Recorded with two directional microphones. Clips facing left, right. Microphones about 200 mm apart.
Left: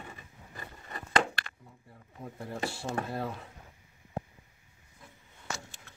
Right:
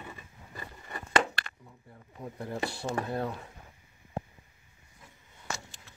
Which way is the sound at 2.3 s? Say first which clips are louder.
Right 1 dB; centre (ahead or behind).